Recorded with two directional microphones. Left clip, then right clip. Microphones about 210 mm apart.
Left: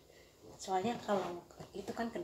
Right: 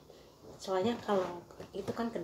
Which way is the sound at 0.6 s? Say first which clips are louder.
Right 3 dB; centre (ahead or behind).